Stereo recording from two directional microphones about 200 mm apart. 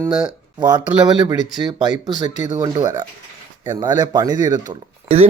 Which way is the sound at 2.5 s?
20° right (ahead or behind).